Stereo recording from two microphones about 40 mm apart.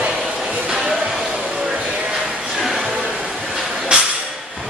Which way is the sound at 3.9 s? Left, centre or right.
Right.